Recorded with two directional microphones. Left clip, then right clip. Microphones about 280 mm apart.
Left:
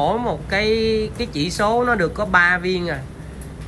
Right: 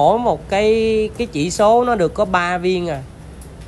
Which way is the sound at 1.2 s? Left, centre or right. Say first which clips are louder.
Right 3 dB; right.